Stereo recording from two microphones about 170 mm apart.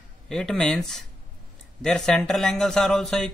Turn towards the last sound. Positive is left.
turn(degrees=0)  # may be behind; listen again after turning